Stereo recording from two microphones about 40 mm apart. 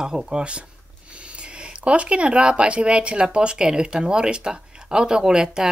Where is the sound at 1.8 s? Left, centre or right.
Right.